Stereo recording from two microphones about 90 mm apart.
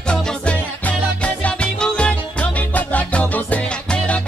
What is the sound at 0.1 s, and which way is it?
Music, 10° left (ahead or behind).